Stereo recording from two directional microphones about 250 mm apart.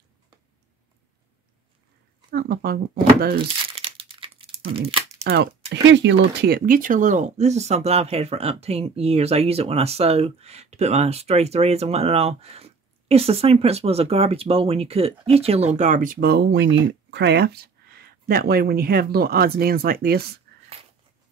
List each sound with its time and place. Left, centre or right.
2.3 s speech: right
3.7 s crumpling: right
4.7 s speech: right
5.2 s speech: right